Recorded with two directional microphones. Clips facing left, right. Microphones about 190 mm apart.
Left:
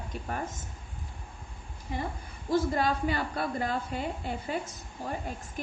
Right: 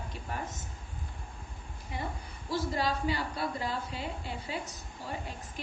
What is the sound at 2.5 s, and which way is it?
A woman's voice, 50° left (ahead or behind).